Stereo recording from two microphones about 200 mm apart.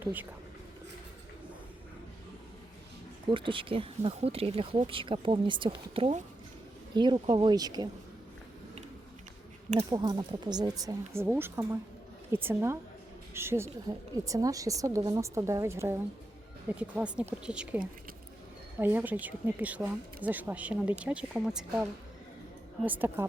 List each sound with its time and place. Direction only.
0.0 s speech: 10° right (ahead or behind)
3.2 s speech: 25° right (ahead or behind)
9.9 s speech: 20° right (ahead or behind); by 21.8 s 5° right (ahead or behind)
22.9 s speech: 10° right (ahead or behind)